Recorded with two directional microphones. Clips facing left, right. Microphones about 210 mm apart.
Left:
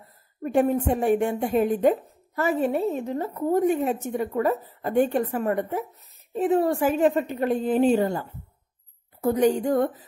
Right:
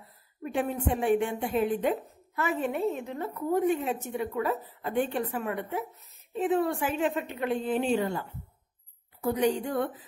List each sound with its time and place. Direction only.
0.4 s a woman's voice: 45° left (ahead or behind)